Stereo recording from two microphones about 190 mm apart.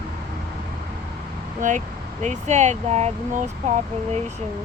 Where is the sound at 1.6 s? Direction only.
40° right (ahead or behind).